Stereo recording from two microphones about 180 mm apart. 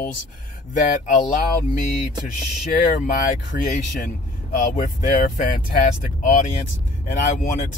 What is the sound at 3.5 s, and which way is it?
Speech, 60° left (ahead or behind).